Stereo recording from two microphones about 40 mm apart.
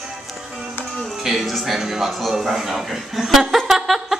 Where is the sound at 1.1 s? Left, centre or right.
Centre.